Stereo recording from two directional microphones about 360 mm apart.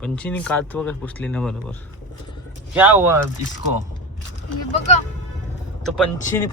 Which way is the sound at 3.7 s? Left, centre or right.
Right.